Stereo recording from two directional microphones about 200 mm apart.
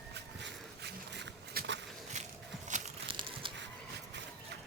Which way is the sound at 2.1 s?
35° right (ahead or behind).